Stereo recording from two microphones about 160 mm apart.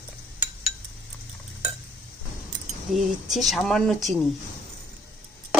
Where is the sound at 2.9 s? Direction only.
Centre (ahead or behind).